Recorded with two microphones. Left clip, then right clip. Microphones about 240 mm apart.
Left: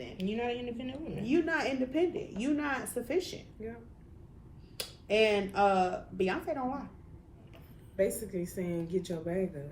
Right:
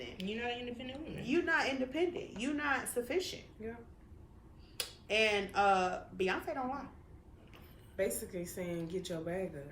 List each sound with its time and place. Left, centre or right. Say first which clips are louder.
0.2 s a woman's voice: left 5 dB; centre
1.2 s a woman's voice: left 2 dB; centre
4.8 s a woman's voice: left 4 dB; centre
8.5 s speech: left 5 dB; centre